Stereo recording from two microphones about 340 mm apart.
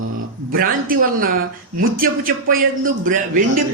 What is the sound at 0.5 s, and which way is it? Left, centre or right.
A man's voice, right.